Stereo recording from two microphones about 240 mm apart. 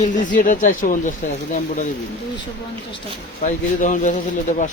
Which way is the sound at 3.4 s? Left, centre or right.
Left.